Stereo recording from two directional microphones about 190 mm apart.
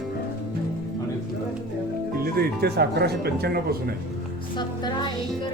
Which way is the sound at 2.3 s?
55° right (ahead or behind).